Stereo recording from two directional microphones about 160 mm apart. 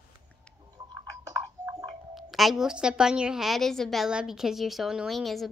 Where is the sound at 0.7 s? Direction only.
25° right (ahead or behind).